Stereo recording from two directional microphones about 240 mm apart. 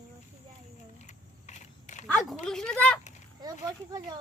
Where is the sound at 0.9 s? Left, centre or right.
Left.